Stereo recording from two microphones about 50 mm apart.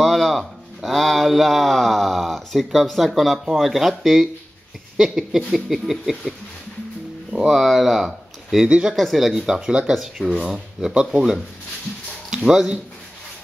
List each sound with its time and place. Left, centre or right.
0.0 s a sound: centre
0.9 s speech: centre
7.4 s speech: centre
8.6 s speech: right
8.9 s speech: centre
9.9 s speech: centre
10.4 s speech: centre